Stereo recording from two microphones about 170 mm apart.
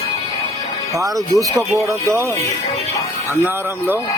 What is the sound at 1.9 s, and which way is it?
Speech, 15° right (ahead or behind).